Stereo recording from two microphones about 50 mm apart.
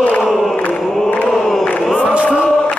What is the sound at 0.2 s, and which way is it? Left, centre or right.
Choir, centre.